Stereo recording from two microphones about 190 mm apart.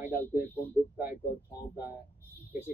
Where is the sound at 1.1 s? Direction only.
55° left (ahead or behind).